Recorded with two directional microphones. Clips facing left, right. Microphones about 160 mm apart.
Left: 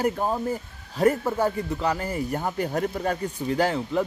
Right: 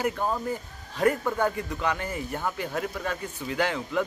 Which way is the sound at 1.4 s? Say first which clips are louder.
Left 2 dB; 30° left (ahead or behind).